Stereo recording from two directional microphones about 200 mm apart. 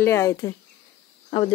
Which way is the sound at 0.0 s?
15° left (ahead or behind).